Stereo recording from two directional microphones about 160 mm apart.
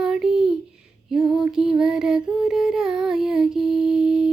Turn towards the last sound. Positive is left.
turn(degrees=-5)  # may be behind; listen again after turning